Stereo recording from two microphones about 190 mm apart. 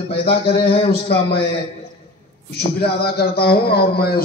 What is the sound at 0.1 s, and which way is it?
Speech, 55° left (ahead or behind).